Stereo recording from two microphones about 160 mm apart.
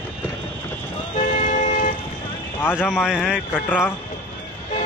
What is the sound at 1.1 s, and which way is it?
Vehicle, 50° left (ahead or behind).